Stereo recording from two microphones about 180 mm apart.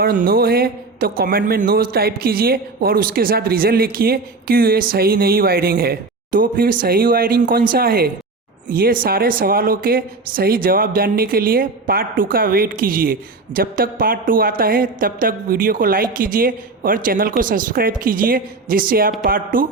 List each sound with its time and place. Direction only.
0.0 s speech: 50° right (ahead or behind)